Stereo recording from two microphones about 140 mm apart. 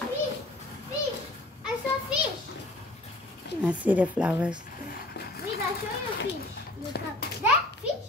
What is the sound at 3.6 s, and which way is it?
Speech, 10° right (ahead or behind).